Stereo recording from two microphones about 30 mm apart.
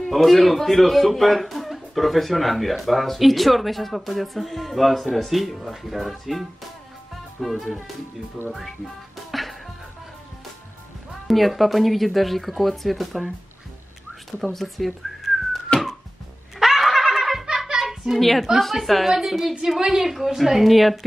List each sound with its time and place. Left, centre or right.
0.1 s speech: centre
7.4 s speech: centre
9.3 s music: centre
11.2 s speech: centre
14.4 s speech: centre
14.9 s whistling: centre
15.7 s music: left
16.5 s a sound: centre
18.2 s a woman's voice: centre